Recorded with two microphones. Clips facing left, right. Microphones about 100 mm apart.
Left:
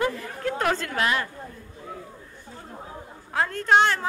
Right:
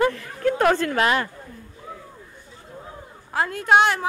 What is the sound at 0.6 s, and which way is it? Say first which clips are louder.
Speech: right 5 dB; 50° right (ahead or behind).